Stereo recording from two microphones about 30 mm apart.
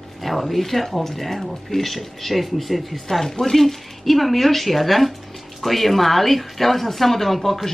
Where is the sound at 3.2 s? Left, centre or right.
Centre.